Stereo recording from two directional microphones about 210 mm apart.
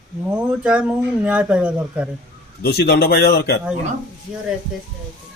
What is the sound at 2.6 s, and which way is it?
Speech, 50° left (ahead or behind).